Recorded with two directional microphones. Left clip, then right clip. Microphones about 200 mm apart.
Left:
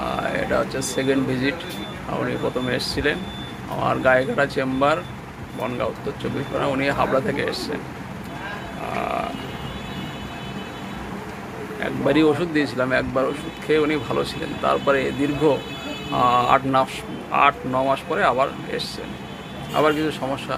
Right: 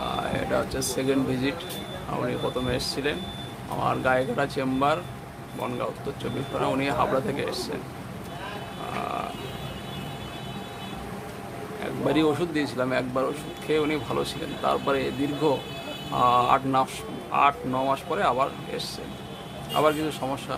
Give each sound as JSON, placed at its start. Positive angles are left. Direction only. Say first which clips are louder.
{"t": 0.2, "sound": "a sound", "louder": "left 5 dB", "side_deg": -5}
{"t": 0.9, "sound": "speech", "louder": "left 4 dB", "side_deg": -5}
{"t": 2.6, "sound": "speech", "louder": "left 5 dB", "side_deg": 0}
{"t": 6.6, "sound": "speech", "louder": "left 3 dB", "side_deg": -5}
{"t": 11.8, "sound": "speech", "louder": "left 5 dB", "side_deg": -5}